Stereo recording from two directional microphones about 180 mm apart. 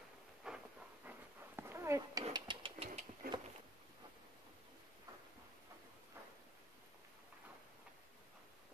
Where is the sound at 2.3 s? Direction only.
30° right (ahead or behind).